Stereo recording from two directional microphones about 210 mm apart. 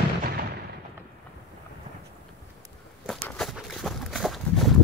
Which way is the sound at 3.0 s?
Centre (ahead or behind).